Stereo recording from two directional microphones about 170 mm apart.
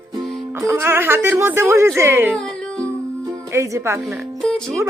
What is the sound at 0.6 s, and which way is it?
A woman's voice, 15° right (ahead or behind).